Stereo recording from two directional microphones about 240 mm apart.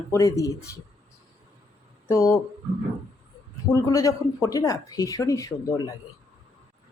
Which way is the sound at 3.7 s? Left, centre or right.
Centre.